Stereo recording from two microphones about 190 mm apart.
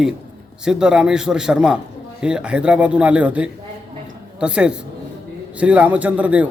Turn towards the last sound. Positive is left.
turn(degrees=-5)  # may be behind; listen again after turning